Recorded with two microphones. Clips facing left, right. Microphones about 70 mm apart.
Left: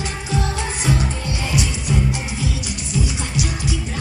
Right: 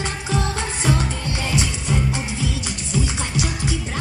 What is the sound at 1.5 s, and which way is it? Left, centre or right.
Music, right.